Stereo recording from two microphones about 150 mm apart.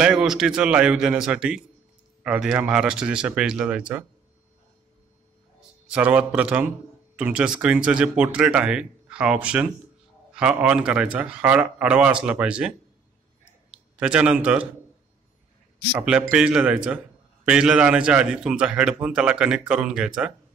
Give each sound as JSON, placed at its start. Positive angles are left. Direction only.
{"t": 0.0, "sound": "a man's voice", "side_deg": -5}
{"t": 5.9, "sound": "a man's voice", "side_deg": -10}
{"t": 15.9, "sound": "a man's voice", "side_deg": -10}